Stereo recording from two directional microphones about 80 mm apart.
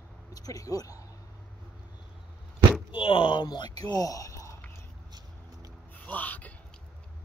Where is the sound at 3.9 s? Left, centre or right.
Left.